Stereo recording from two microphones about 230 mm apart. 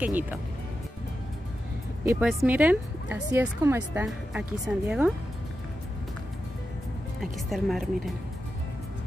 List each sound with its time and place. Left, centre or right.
0.0 s speech: centre
2.0 s speech: centre
7.4 s a woman's voice: centre